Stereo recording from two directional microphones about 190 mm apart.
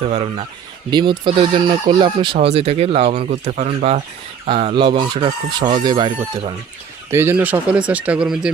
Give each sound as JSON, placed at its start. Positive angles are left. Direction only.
{"t": 0.1, "sound": "speech", "side_deg": -35}
{"t": 4.4, "sound": "speech", "side_deg": -30}
{"t": 7.1, "sound": "speech", "side_deg": -10}